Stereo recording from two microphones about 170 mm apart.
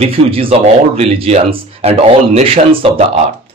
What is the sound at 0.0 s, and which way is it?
A man's voice, 35° right (ahead or behind).